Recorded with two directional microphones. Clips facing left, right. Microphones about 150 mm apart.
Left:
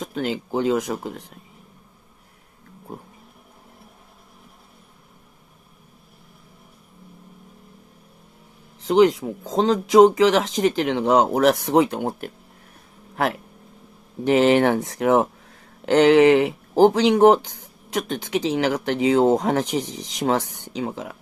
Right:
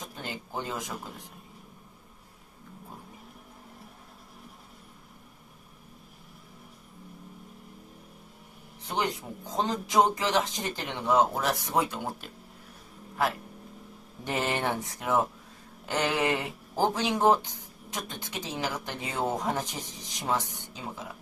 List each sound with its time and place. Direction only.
0.0 s speech: 90° left
8.8 s speech: 90° left; by 12.3 s 60° left (ahead or behind)
13.1 s speech: 75° left (ahead or behind)